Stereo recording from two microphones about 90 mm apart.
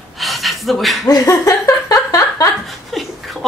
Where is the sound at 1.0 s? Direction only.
40° left (ahead or behind).